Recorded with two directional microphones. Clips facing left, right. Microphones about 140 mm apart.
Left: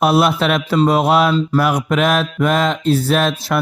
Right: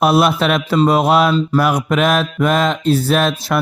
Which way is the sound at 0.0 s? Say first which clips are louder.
Right 1 dB; 40° right (ahead or behind).